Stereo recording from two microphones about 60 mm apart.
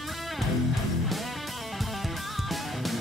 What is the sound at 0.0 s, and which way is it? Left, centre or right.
Music, centre.